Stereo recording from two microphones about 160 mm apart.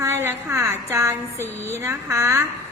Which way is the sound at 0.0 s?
15° right (ahead or behind).